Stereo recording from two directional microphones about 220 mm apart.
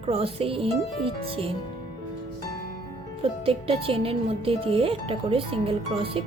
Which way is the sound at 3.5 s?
25° right (ahead or behind).